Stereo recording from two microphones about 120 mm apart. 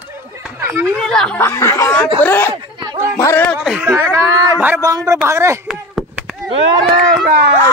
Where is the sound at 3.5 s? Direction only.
5° right (ahead or behind).